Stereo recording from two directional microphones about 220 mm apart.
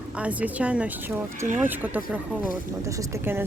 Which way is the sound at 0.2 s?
5° right (ahead or behind).